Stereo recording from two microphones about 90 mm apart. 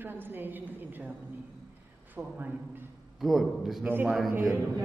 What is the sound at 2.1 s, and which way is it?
Speech, 20° right (ahead or behind).